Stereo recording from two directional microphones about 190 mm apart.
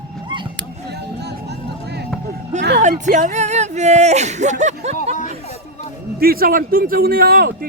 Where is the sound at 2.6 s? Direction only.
60° right (ahead or behind).